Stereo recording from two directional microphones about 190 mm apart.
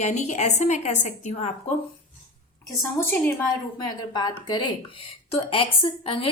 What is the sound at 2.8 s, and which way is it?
Speech, 10° left (ahead or behind).